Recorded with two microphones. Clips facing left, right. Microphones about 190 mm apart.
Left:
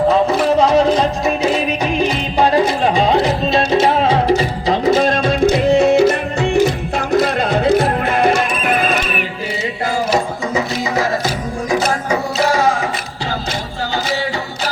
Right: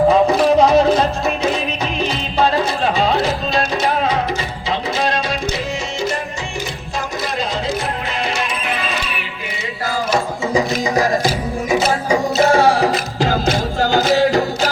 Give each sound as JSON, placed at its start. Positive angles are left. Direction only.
{"t": 0.6, "sound": "music", "side_deg": -10}
{"t": 2.0, "sound": "music", "side_deg": 15}
{"t": 10.5, "sound": "music", "side_deg": -15}
{"t": 12.4, "sound": "music", "side_deg": -25}
{"t": 13.9, "sound": "music", "side_deg": -40}